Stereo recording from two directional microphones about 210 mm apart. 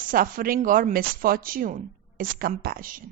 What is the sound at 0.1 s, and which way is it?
Speech, 40° right (ahead or behind).